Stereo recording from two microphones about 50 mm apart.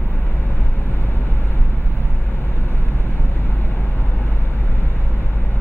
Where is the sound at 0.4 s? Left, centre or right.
Left.